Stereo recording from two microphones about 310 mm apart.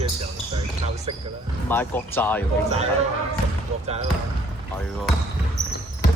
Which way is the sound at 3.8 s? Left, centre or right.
Centre.